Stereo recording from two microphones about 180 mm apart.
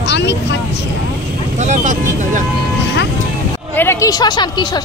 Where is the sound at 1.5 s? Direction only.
45° right (ahead or behind).